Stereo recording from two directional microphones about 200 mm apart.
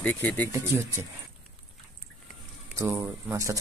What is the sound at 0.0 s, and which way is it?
Speech, 5° left (ahead or behind).